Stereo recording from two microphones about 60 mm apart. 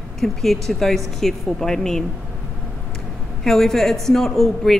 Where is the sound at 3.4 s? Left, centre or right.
Centre.